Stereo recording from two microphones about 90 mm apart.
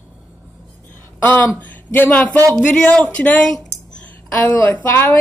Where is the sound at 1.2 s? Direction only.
20° left (ahead or behind).